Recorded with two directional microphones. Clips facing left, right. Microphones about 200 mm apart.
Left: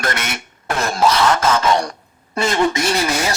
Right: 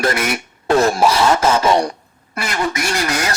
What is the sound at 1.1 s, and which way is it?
Speech, 30° right (ahead or behind).